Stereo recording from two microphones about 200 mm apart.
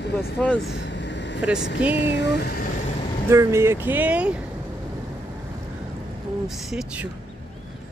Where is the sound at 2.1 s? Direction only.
60° left (ahead or behind).